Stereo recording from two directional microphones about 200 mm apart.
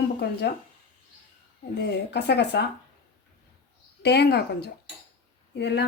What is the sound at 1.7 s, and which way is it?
Speech, 55° left (ahead or behind).